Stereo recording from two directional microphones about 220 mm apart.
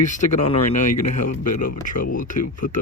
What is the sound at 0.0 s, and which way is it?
Speech, 35° left (ahead or behind).